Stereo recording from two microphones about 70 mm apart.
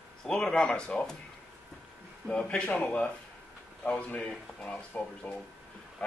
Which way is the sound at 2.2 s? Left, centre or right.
Centre.